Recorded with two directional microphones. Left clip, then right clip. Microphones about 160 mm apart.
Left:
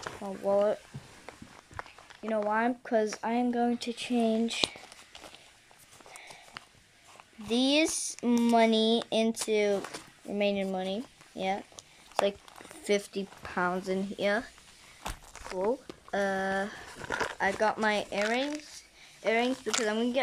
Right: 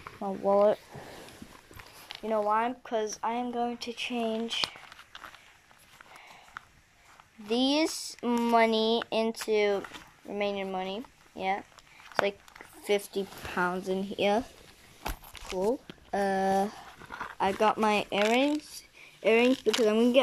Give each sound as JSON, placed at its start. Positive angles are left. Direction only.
{"t": 0.2, "sound": "speech", "side_deg": -5}
{"t": 2.2, "sound": "speech", "side_deg": 25}
{"t": 4.5, "sound": "a sound", "side_deg": 20}
{"t": 7.4, "sound": "speech", "side_deg": 15}
{"t": 12.1, "sound": "a sound", "side_deg": 15}
{"t": 13.0, "sound": "speech", "side_deg": 10}
{"t": 14.1, "sound": "speech", "side_deg": -10}
{"t": 16.1, "sound": "speech", "side_deg": -5}
{"t": 17.0, "sound": "a sound", "side_deg": 35}
{"t": 17.4, "sound": "speech", "side_deg": -5}